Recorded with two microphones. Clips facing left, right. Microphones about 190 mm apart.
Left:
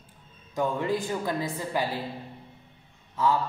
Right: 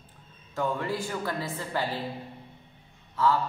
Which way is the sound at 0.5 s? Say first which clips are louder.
Left 2 dB; 15° left (ahead or behind).